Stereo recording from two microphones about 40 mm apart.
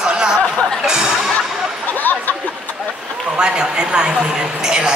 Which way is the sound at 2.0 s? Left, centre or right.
Left.